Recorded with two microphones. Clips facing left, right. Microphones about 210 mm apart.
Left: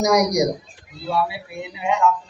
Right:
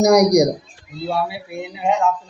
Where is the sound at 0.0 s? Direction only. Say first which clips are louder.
Right 5 dB; 40° right (ahead or behind).